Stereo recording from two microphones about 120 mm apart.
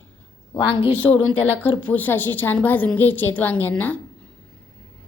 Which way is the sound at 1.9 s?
15° left (ahead or behind).